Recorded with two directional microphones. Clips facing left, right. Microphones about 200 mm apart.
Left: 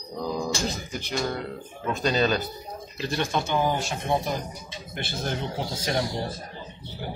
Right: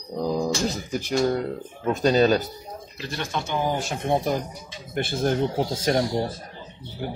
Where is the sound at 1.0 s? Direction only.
40° right (ahead or behind).